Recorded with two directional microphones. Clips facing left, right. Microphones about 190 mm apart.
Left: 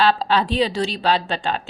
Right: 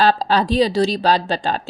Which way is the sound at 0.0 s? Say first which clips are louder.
Right 2 dB; 40° right (ahead or behind).